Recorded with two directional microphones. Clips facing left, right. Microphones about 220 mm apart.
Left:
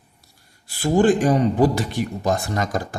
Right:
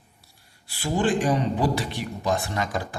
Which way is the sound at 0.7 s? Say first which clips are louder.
Left 7 dB; 45° left (ahead or behind).